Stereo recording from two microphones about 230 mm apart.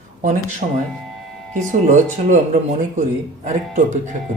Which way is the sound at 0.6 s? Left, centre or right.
Right.